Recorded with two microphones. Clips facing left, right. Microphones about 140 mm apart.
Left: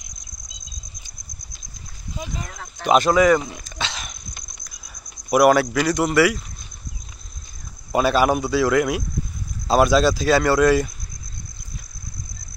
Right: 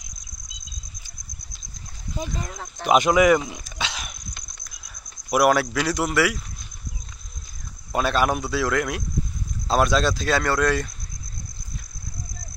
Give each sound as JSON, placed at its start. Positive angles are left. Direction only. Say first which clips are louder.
{"t": 2.4, "sound": "speech", "louder": "left 3 dB", "side_deg": -20}
{"t": 7.9, "sound": "speech", "louder": "left 4 dB", "side_deg": 5}